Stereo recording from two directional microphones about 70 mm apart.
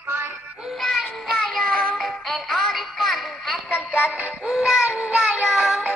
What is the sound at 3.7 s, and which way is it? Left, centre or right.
Music, left.